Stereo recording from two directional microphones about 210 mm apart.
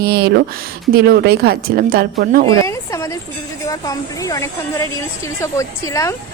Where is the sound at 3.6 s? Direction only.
15° left (ahead or behind).